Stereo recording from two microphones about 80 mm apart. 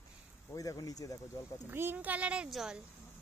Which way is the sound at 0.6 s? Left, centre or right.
Left.